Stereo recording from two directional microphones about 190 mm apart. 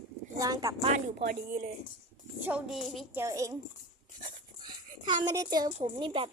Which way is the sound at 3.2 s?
15° right (ahead or behind).